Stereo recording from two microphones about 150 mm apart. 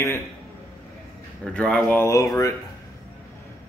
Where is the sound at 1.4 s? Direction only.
5° left (ahead or behind); by 2.5 s 25° left (ahead or behind).